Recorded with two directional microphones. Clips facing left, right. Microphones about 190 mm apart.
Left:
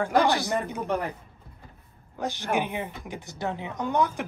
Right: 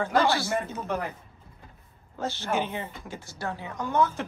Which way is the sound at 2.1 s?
15° left (ahead or behind).